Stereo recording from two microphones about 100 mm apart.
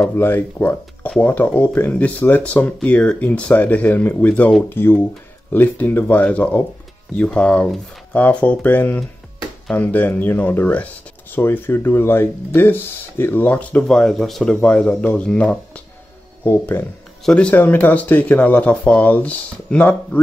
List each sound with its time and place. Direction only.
0.1 s speech: 20° left (ahead or behind)
16.4 s speech: 20° left (ahead or behind)
17.2 s speech: 10° left (ahead or behind)